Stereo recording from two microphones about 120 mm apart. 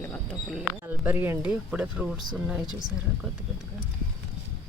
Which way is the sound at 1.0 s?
20° right (ahead or behind).